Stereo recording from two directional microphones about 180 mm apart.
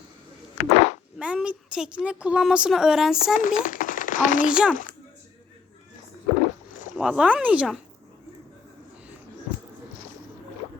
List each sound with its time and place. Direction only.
0.7 s a sound: 35° left (ahead or behind)
1.2 s a woman's voice: 5° right (ahead or behind)
3.3 s a child's voice: 50° left (ahead or behind)
4.4 s a woman's voice: 5° right (ahead or behind)
6.9 s a woman's voice: 5° right (ahead or behind)